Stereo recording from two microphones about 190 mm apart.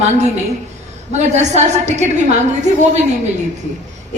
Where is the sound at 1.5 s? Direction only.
35° right (ahead or behind).